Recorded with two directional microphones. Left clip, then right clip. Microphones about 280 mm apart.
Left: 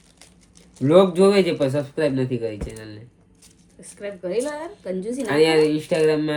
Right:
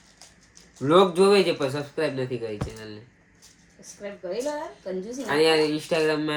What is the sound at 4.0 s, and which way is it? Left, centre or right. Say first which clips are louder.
A woman's voice: left 5 dB; left.